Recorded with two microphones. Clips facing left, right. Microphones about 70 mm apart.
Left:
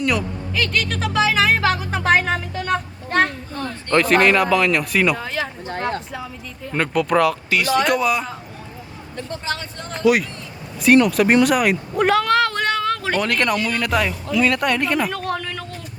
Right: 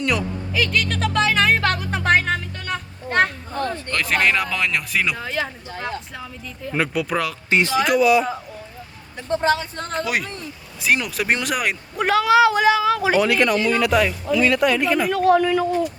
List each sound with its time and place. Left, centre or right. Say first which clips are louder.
0.0 s a woman's voice: left 1 dB; centre
5.6 s speech: left 5 dB; left
6.7 s a woman's voice: left 3 dB; centre
9.5 s speech: right 7 dB; right
10.0 s a woman's voice: left 9 dB; centre